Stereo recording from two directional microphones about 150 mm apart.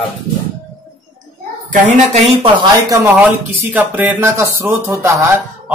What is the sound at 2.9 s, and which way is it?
Speech, 20° right (ahead or behind).